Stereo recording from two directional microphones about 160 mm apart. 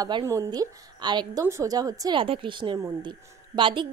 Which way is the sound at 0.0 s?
25° right (ahead or behind).